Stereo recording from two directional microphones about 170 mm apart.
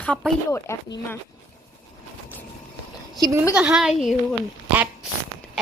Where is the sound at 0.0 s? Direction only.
5° left (ahead or behind).